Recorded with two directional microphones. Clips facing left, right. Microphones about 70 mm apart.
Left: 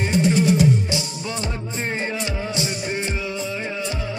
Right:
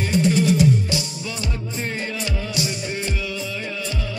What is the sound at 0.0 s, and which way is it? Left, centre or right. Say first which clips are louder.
Music: even; left.